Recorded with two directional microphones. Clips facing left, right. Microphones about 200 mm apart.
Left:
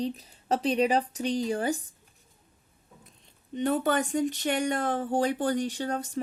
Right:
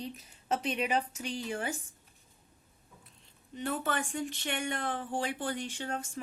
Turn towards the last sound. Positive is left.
turn(degrees=35)  # may be behind; listen again after turning